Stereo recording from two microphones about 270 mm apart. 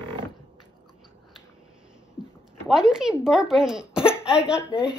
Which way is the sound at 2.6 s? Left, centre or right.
Centre.